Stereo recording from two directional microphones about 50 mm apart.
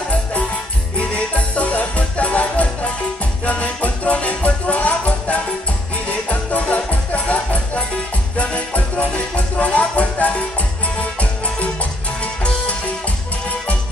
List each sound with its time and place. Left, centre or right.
0.9 s music: left